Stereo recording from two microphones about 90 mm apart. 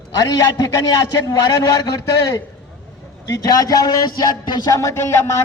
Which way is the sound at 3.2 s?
40° left (ahead or behind).